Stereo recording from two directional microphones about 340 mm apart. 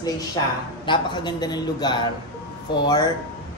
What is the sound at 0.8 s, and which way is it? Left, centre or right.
A man's voice, centre.